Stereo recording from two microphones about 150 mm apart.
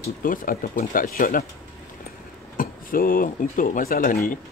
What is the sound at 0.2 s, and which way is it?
Speech, 65° left (ahead or behind).